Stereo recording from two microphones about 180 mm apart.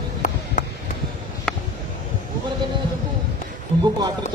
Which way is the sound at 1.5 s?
5° left (ahead or behind).